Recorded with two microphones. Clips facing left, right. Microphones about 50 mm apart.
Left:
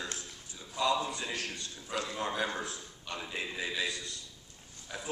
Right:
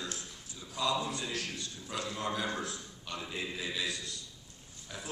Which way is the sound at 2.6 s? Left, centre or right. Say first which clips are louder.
Even; centre.